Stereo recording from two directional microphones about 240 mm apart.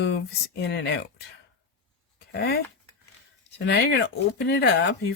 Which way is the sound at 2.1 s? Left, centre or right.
Left.